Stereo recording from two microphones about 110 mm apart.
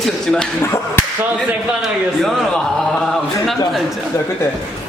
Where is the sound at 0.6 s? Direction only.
25° left (ahead or behind).